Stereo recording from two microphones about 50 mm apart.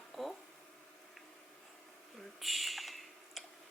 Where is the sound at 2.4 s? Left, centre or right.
Centre.